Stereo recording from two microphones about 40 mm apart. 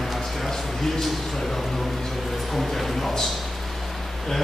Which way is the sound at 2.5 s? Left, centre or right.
Centre.